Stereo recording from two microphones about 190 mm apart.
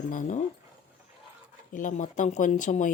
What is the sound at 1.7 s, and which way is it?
A woman's voice, 45° left (ahead or behind).